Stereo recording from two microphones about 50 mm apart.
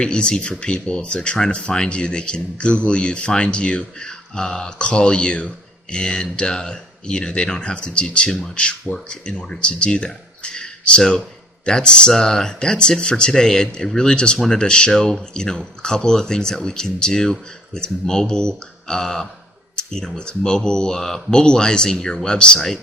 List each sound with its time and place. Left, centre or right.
0.0 s speech: centre
14.6 s speech: centre
22.5 s speech: centre